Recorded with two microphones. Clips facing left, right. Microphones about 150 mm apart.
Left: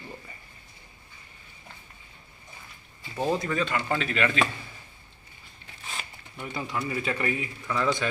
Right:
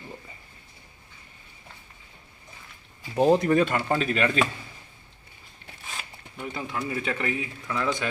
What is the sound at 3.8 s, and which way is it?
Speech, 35° right (ahead or behind).